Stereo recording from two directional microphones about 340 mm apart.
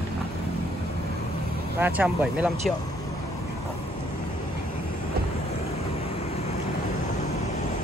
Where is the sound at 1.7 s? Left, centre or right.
Centre.